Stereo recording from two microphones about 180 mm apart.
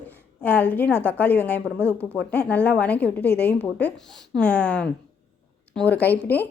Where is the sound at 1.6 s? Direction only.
15° right (ahead or behind).